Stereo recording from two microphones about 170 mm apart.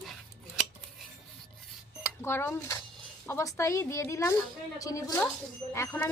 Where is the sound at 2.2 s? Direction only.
15° left (ahead or behind).